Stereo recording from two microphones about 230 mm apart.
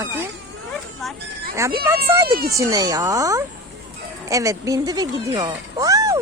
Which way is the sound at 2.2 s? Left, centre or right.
Right.